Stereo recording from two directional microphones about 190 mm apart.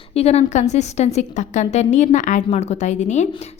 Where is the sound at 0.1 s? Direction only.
35° left (ahead or behind).